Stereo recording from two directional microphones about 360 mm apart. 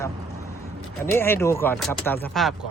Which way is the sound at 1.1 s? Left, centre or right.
Centre.